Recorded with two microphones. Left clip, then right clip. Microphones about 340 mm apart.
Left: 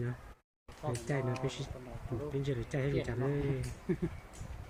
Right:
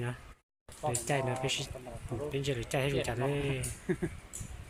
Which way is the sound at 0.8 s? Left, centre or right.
Right.